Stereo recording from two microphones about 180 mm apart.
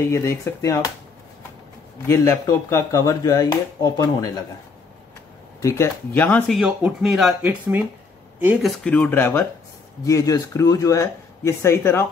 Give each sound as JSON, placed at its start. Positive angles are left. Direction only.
{"t": 0.1, "sound": "speech", "side_deg": 15}
{"t": 2.0, "sound": "speech", "side_deg": 15}
{"t": 5.6, "sound": "speech", "side_deg": 15}
{"t": 8.7, "sound": "speech", "side_deg": 5}